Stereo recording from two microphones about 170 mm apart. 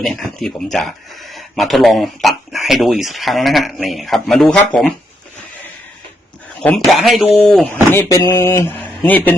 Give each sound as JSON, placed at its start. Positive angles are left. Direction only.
{"t": 0.0, "sound": "speech", "side_deg": 5}
{"t": 6.6, "sound": "speech", "side_deg": 5}
{"t": 7.9, "sound": "a sound", "side_deg": 10}
{"t": 8.2, "sound": "speech", "side_deg": 20}